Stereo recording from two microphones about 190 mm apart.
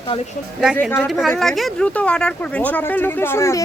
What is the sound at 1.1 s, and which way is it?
Speech, centre (ahead or behind).